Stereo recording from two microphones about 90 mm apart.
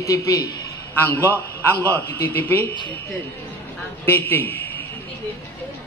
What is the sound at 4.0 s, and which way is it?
Speech, 25° left (ahead or behind).